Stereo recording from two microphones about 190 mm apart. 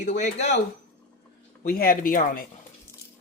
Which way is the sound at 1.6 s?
50° left (ahead or behind).